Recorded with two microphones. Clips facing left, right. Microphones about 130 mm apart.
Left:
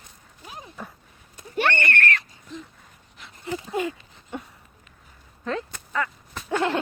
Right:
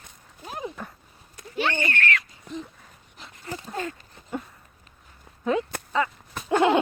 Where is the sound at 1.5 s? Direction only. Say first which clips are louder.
Left 2 dB; 65° left (ahead or behind).